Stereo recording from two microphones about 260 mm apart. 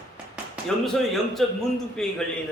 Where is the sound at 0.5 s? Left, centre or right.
Centre.